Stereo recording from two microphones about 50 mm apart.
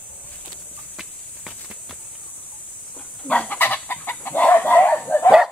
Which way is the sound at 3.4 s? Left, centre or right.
Left.